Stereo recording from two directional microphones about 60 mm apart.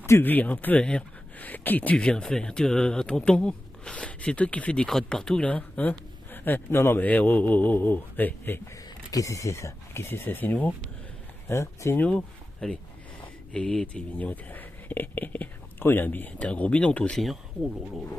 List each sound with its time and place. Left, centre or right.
0.2 s speech: left
2.0 s speech: centre
4.7 s speech: centre
5.4 s speech: left
7.0 s speech: left
9.1 s speech: left
10.0 s speech: left
11.4 s speech: left
12.0 s speech: left
12.6 s speech: centre